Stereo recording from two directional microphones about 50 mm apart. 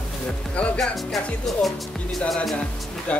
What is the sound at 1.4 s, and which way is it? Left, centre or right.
Speech, centre.